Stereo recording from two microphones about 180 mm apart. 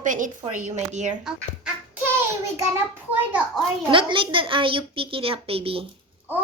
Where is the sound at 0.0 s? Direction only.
45° right (ahead or behind).